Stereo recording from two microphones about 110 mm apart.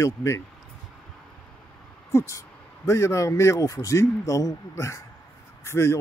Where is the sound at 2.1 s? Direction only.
25° left (ahead or behind).